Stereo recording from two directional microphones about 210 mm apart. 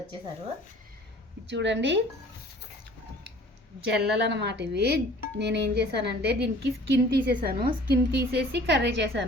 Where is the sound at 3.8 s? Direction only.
50° right (ahead or behind).